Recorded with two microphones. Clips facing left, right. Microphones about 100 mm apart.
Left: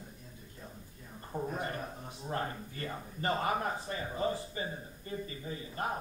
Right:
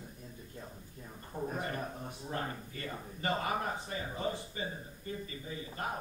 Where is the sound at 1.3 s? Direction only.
20° left (ahead or behind).